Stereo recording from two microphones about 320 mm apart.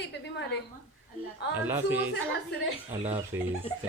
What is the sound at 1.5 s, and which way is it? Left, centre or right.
Speech, centre.